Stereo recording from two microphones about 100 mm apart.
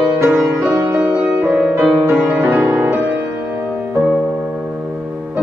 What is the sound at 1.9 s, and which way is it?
Music, 10° right (ahead or behind).